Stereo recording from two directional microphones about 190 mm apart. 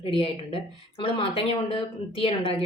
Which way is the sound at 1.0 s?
30° left (ahead or behind).